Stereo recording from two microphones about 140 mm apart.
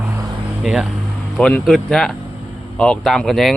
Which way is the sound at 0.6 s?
5° right (ahead or behind).